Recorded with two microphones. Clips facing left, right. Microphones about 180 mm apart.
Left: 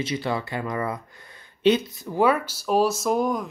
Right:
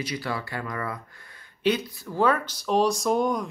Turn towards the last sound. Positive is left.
turn(degrees=0)  # may be behind; listen again after turning